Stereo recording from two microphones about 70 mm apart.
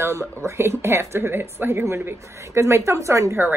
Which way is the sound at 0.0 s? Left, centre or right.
Right.